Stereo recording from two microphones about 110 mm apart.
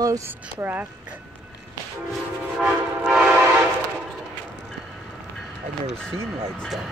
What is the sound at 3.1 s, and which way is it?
Train, 10° right (ahead or behind).